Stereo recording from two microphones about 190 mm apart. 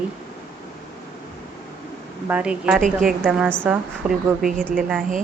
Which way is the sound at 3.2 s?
5° right (ahead or behind).